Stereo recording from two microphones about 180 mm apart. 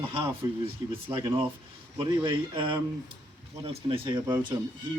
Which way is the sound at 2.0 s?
25° right (ahead or behind).